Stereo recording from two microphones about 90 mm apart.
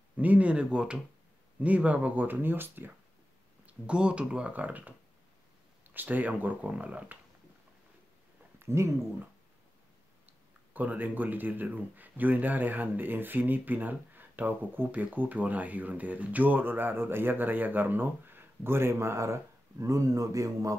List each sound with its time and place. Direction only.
0.2 s speech: 15° right (ahead or behind)
3.6 s speech: 10° right (ahead or behind)
8.5 s speech: 30° right (ahead or behind)
10.2 s speech: 20° right (ahead or behind); by 20.7 s 40° right (ahead or behind)